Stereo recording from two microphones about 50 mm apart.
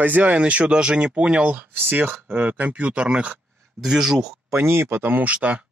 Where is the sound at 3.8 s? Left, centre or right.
Centre.